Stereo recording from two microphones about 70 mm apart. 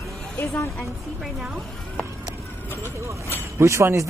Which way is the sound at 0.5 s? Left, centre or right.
Left.